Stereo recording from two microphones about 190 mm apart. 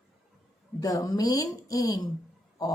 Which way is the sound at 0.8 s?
20° left (ahead or behind).